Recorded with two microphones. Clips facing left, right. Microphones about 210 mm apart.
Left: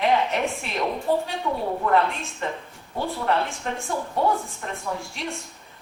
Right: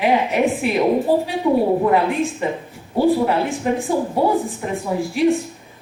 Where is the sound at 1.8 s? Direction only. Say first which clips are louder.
Right 6 dB; 15° right (ahead or behind).